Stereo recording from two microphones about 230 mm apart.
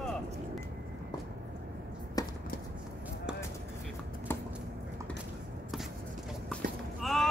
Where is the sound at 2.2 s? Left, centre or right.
Centre.